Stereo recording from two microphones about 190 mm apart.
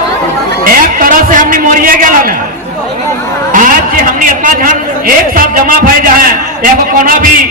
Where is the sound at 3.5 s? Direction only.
45° right (ahead or behind).